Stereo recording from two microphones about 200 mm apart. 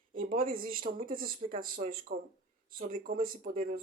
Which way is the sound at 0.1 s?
45° right (ahead or behind).